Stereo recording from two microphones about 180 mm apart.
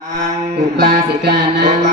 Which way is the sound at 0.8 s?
65° right (ahead or behind).